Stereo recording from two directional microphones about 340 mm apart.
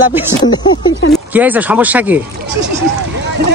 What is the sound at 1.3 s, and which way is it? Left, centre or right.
Speech, centre.